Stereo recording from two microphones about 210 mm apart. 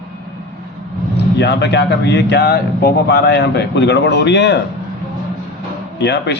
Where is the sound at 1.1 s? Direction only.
55° left (ahead or behind).